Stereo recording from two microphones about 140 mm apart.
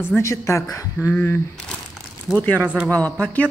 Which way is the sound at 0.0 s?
20° left (ahead or behind).